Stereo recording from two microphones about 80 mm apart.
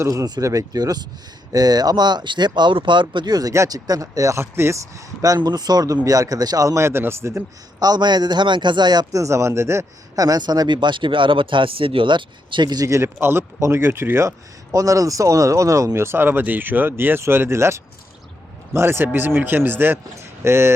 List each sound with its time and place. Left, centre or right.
0.1 s speech: right
3.7 s speech: right
4.4 s speech: right
5.4 s speech: right
7.8 s speech: right
9.1 s speech: right
10.2 s speech: right
12.9 s speech: right
14.7 s speech: right